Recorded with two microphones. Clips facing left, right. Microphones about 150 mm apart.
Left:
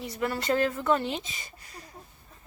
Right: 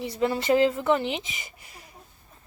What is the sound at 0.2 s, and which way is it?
Speech, 20° right (ahead or behind).